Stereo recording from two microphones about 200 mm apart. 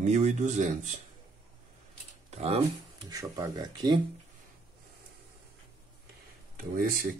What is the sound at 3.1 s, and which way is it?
Speech, 20° right (ahead or behind).